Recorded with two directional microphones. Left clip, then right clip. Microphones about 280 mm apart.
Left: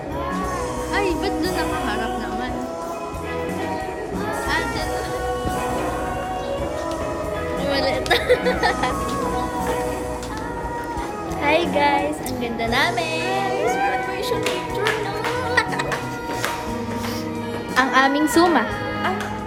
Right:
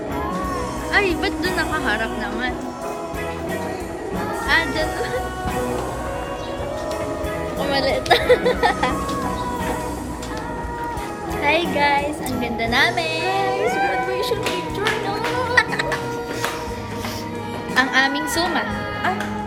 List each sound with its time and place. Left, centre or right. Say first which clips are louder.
0.9 s speech: right 3 dB; centre
4.4 s music: right 6 dB; centre
7.7 s speech: right 2 dB; centre
11.4 s a child's voice: even; centre
15.6 s music: right 4 dB; centre
17.7 s a sound: left 1 dB; left